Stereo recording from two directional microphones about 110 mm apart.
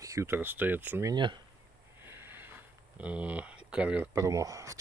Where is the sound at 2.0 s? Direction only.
20° right (ahead or behind).